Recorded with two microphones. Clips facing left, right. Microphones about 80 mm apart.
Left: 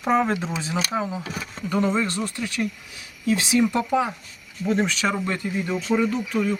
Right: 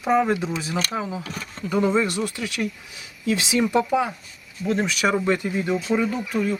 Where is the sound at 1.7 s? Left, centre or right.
Centre.